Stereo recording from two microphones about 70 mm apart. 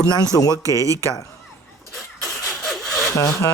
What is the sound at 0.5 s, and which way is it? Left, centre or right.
Speech, right.